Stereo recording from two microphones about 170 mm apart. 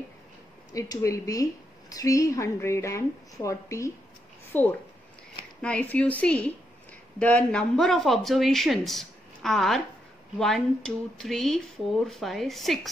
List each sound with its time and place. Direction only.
0.7 s speech: 20° left (ahead or behind); by 12.9 s centre (ahead or behind)